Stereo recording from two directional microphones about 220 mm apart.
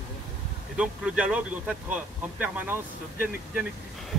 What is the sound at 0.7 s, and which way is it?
Speech, 5° right (ahead or behind).